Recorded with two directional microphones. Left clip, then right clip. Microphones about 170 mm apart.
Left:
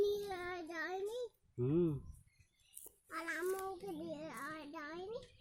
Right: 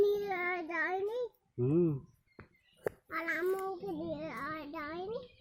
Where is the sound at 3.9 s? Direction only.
5° left (ahead or behind).